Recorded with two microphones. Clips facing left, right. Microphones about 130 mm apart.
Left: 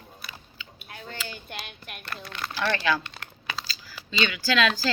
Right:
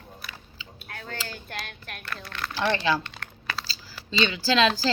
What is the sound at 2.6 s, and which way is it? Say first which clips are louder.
Speech: right 1 dB; 25° right (ahead or behind).